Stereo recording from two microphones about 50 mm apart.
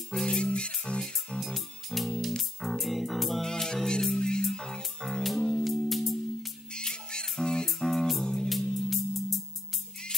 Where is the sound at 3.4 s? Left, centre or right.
Centre.